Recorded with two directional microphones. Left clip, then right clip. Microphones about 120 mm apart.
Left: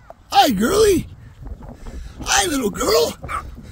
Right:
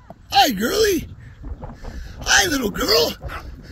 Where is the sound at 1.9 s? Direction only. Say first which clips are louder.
Right 2 dB; 55° left (ahead or behind).